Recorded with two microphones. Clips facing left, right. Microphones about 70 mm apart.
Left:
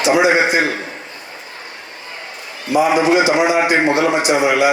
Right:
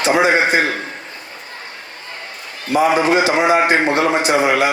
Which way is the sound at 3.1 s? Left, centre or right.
Right.